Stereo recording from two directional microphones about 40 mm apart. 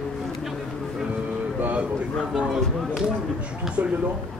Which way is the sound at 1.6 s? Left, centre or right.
Right.